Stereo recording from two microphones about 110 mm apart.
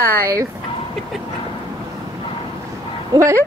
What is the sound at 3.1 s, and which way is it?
Speech, 30° right (ahead or behind).